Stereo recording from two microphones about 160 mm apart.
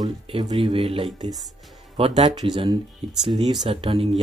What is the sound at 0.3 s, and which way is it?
Speech, 35° right (ahead or behind).